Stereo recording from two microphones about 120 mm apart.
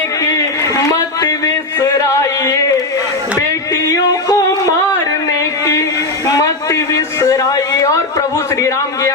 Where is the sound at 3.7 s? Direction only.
30° left (ahead or behind).